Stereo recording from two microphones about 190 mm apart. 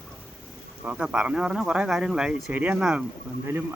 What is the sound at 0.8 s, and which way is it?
A man's voice, 5° right (ahead or behind).